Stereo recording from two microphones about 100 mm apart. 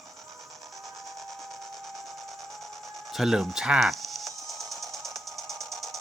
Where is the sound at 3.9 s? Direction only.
Centre (ahead or behind).